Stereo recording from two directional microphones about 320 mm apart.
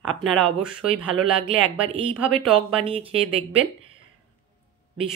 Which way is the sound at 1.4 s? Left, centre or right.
Centre.